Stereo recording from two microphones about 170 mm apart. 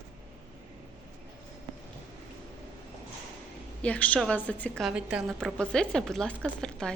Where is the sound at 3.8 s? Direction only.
10° left (ahead or behind).